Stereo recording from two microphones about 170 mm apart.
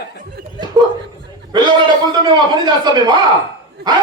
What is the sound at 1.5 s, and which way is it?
Speech, 25° right (ahead or behind).